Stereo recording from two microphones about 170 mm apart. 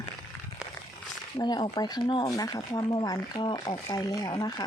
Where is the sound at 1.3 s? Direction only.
25° left (ahead or behind).